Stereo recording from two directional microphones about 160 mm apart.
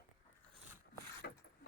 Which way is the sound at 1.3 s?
65° left (ahead or behind).